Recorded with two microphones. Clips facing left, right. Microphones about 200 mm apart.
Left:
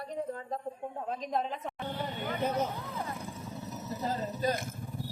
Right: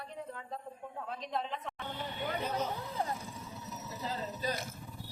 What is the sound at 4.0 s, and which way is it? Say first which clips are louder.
Speech: left 6 dB; 50° left (ahead or behind).